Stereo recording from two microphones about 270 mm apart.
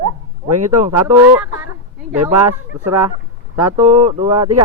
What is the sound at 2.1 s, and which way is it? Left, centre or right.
Speech, right.